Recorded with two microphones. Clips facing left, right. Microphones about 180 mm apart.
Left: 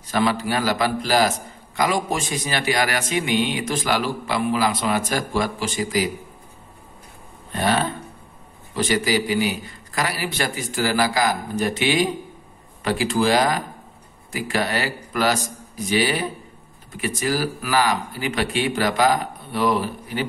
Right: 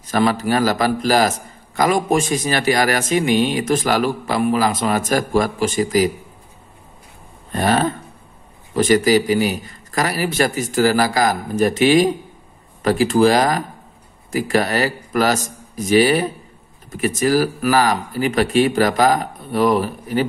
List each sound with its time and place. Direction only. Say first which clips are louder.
0.1 s a man's voice: right 4 dB; 45° right (ahead or behind)
7.5 s a man's voice: right 4 dB; 45° right (ahead or behind)